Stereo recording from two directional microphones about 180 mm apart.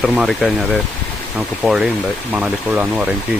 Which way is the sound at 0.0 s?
5° right (ahead or behind).